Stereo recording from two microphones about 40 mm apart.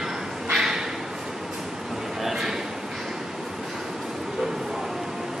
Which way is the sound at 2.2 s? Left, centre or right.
Centre.